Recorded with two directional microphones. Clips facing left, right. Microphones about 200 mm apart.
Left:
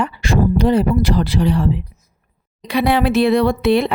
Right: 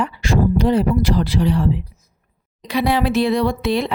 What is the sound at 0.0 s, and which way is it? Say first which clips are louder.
Speech: left 1 dB; 65° left (ahead or behind).